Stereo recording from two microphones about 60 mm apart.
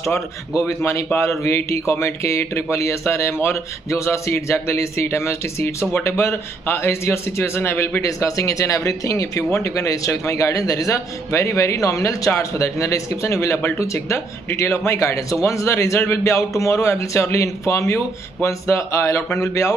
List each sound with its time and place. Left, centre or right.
0.7 s a man's voice: left
8.0 s speech: left
11.3 s speech: left
12.3 s a man's voice: left